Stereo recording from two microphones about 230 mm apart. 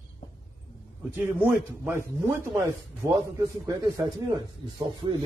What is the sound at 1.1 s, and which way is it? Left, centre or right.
A man's voice, centre.